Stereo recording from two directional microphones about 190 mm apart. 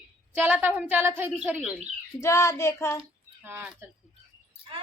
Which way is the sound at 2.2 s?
15° left (ahead or behind).